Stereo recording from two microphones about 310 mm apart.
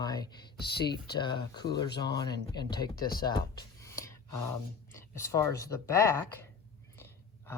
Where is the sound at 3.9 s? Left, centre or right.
Centre.